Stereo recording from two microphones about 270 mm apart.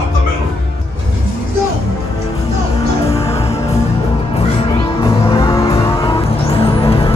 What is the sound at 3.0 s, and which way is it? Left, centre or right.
Music, left.